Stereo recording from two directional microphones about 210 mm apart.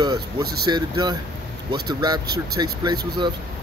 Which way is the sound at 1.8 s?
20° right (ahead or behind).